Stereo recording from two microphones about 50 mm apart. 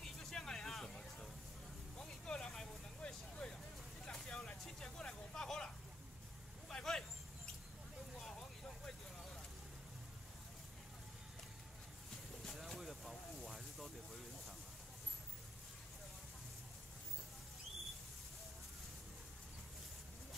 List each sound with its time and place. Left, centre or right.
0.0 s vehicle: centre
6.7 s vehicle: centre
8.2 s vehicle: centre
12.4 s vehicle: centre